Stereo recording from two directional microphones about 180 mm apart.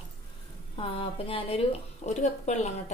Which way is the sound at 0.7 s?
30° left (ahead or behind).